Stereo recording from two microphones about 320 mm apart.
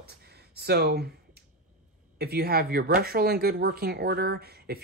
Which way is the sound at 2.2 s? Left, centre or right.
Right.